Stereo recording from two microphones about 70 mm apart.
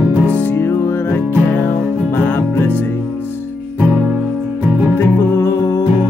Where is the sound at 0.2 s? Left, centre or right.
Left.